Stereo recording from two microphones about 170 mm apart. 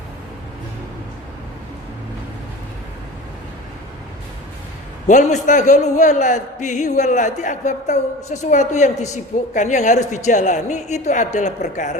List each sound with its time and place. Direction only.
5.0 s a man's voice: 45° left (ahead or behind)